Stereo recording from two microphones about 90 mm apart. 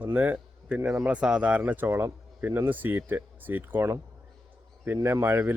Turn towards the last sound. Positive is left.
turn(degrees=-25)  # may be behind; listen again after turning